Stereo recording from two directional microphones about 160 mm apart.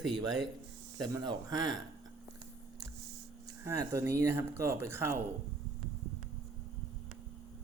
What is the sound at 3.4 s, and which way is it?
Speech, 20° right (ahead or behind).